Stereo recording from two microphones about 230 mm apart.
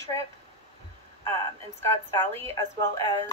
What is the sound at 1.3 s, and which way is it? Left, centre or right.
Speech, centre.